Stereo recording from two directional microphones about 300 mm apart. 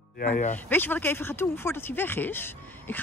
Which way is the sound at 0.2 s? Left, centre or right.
Left.